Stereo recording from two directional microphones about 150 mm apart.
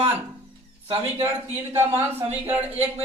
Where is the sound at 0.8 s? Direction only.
40° right (ahead or behind).